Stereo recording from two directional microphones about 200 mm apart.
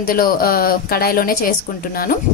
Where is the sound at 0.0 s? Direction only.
45° left (ahead or behind).